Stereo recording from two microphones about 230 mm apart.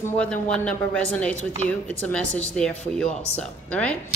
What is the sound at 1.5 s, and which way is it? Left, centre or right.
Speech, right.